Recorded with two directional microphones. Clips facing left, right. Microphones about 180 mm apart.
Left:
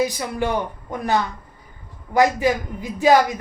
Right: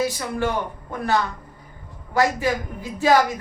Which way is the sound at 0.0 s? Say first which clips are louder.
Left 1 dB; 15° left (ahead or behind).